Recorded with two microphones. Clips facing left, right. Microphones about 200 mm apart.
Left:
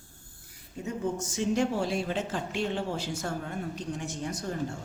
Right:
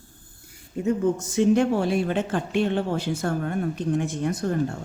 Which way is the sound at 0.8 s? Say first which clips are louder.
Right 9 dB; 60° right (ahead or behind).